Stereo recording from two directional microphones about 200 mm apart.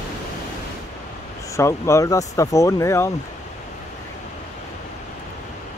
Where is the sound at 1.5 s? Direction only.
15° left (ahead or behind).